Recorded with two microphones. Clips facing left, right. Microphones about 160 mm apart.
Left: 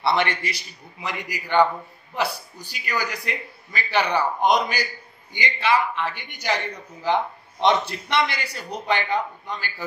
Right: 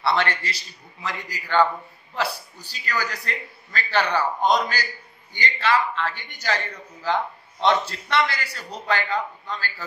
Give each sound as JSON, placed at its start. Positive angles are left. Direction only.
{"t": 0.0, "sound": "a man's voice", "side_deg": 15}